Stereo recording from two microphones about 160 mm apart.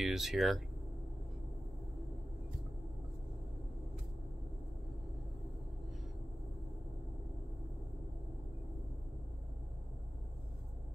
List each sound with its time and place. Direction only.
0.0 s speech: centre (ahead or behind)